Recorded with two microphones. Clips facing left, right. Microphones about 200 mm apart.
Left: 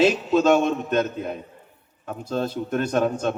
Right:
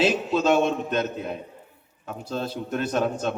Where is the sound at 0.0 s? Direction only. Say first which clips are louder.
Left 4 dB; 45° left (ahead or behind).